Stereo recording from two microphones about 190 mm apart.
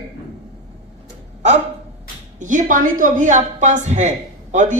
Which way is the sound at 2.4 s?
40° right (ahead or behind).